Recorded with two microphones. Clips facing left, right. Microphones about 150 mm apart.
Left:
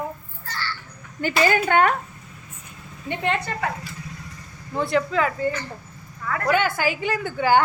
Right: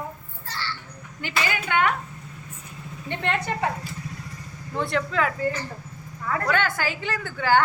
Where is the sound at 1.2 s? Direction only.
45° left (ahead or behind).